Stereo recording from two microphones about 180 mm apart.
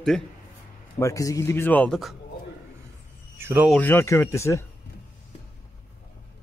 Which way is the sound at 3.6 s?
10° left (ahead or behind).